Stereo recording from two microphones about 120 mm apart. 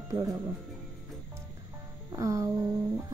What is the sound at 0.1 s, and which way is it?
Speech, 30° right (ahead or behind).